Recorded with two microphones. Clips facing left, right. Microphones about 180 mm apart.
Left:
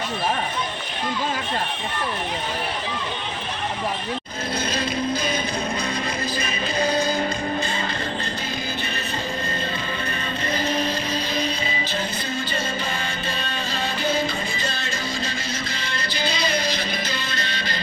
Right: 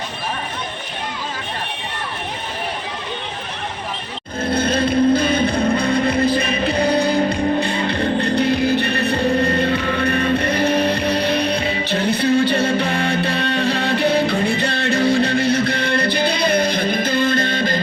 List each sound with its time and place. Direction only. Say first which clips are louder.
4.4 s music: right 9 dB; 55° right (ahead or behind)